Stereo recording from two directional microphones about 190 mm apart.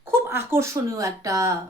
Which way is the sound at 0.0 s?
10° right (ahead or behind).